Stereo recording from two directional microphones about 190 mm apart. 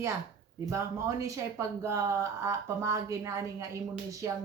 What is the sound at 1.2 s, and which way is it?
Speech, 15° right (ahead or behind).